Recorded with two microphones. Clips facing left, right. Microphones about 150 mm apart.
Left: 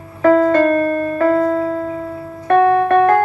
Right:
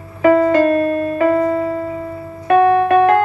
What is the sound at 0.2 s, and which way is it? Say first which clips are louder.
Piano: even; 10° right (ahead or behind).